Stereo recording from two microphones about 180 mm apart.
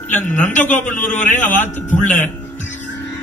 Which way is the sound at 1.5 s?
10° left (ahead or behind).